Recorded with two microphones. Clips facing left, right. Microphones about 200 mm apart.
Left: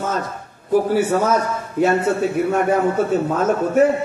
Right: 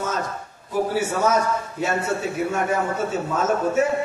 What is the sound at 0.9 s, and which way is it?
A man's voice, 55° left (ahead or behind).